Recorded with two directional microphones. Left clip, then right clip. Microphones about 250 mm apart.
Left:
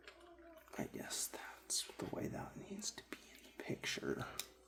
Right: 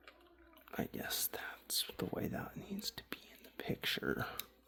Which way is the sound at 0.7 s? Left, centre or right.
Right.